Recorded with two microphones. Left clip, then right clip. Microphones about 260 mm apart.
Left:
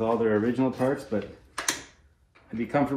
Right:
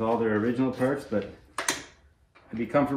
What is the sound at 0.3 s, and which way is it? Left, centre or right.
Speech, centre.